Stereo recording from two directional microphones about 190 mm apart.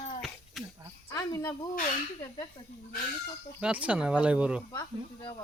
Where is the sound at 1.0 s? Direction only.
15° left (ahead or behind).